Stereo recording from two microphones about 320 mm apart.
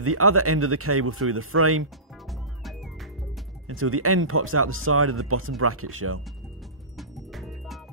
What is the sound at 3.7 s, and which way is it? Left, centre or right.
Speech, right.